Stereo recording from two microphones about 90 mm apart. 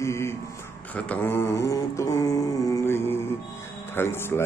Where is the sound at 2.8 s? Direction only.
25° left (ahead or behind).